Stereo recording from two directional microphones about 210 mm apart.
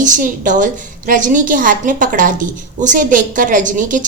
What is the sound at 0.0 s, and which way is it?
A woman's voice, 40° right (ahead or behind).